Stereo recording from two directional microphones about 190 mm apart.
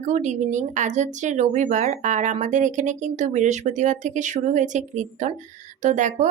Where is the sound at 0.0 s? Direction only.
40° right (ahead or behind).